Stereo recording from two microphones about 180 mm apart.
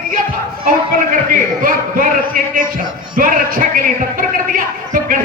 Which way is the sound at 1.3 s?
50° right (ahead or behind).